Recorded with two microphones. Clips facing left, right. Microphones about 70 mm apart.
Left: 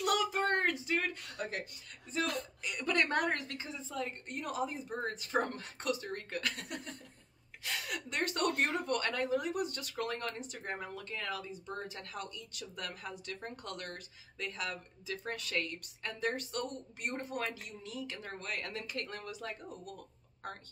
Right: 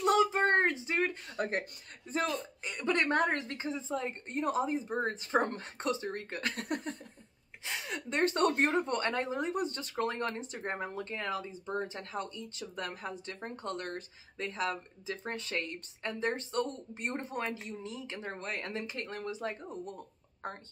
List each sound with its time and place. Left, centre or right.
0.0 s a sound: right
1.3 s speech: right
2.6 s speech: right
6.5 s speech: right
7.6 s speech: right